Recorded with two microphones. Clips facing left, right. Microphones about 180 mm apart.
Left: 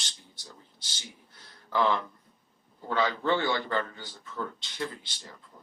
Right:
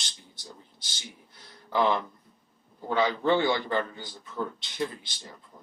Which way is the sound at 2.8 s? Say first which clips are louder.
Right 3 dB; 15° right (ahead or behind).